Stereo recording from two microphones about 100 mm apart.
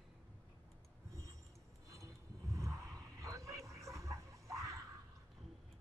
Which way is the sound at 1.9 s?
30° right (ahead or behind).